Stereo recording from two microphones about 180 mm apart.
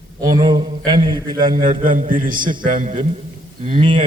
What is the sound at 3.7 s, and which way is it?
Speech, 30° right (ahead or behind).